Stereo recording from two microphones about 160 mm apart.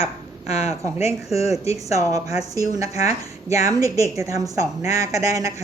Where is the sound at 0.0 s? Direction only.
40° left (ahead or behind).